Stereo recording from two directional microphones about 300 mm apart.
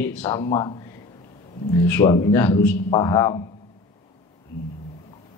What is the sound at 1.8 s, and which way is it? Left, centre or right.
Speech, centre.